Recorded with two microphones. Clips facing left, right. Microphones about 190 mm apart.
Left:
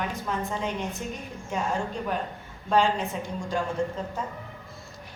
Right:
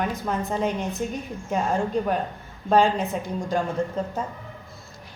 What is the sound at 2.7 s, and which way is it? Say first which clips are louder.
Speech: right 4 dB; 45° right (ahead or behind).